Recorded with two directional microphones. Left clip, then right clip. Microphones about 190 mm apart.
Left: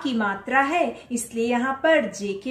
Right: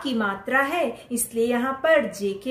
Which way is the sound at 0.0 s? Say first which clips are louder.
Even; 15° right (ahead or behind).